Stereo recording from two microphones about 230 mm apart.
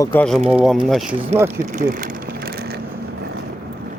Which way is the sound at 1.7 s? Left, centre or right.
Right.